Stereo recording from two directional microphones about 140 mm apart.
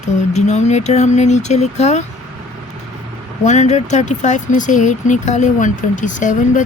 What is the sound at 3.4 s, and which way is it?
Speech, 55° left (ahead or behind).